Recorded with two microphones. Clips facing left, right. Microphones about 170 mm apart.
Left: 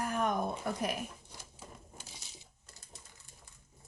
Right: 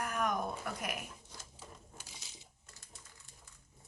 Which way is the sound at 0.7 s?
30° left (ahead or behind).